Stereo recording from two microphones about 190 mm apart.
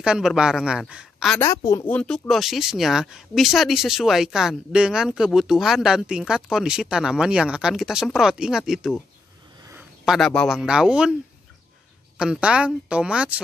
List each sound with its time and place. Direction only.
0.0 s speech: 5° right (ahead or behind)
1.4 s speech: 15° left (ahead or behind); by 8.9 s centre (ahead or behind)
9.6 s a sound: 15° right (ahead or behind)
10.0 s speech: centre (ahead or behind)
12.2 s speech: 5° right (ahead or behind)